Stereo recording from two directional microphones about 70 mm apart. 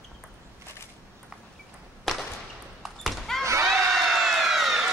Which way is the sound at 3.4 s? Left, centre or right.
Right.